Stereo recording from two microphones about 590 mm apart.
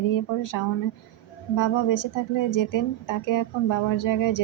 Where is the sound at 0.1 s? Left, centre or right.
Left.